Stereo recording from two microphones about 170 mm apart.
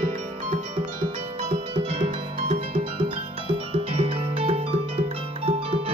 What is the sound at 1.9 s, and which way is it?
Music, 35° right (ahead or behind).